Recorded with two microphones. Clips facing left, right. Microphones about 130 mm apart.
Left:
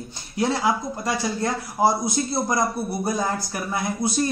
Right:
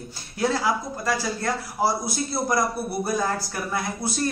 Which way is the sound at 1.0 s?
20° left (ahead or behind).